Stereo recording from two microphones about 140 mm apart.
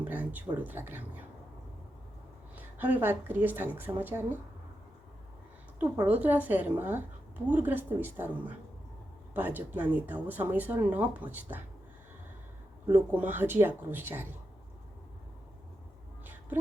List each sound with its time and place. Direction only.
0.0 s speech: 10° right (ahead or behind)
2.6 s speech: 10° right (ahead or behind)
6.1 s speech: 10° right (ahead or behind)
12.9 s speech: 15° right (ahead or behind)
16.2 s a sound: 15° right (ahead or behind)